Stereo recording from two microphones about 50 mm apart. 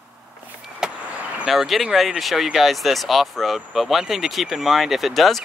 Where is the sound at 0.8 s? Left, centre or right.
Centre.